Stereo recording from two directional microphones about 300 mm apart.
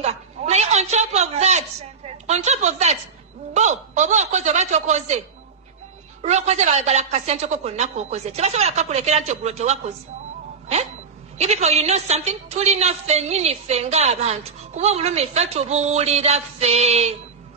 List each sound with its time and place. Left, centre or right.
0.0 s a woman's voice: right
6.2 s a woman's voice: right
11.3 s a woman's voice: right